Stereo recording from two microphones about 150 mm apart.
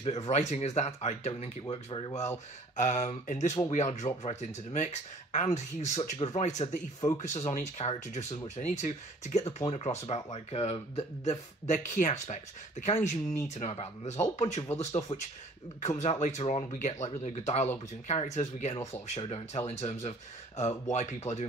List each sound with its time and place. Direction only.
0.0 s speech: 45° left (ahead or behind)
1.7 s speech: 35° left (ahead or behind)
2.8 s speech: 50° left (ahead or behind)